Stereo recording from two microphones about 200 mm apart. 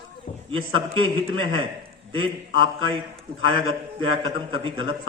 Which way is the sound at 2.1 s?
25° right (ahead or behind).